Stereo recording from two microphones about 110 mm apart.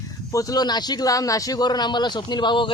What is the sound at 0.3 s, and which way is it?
Speech, 30° left (ahead or behind).